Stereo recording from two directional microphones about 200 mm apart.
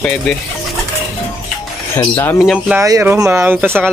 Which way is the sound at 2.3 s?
Centre (ahead or behind).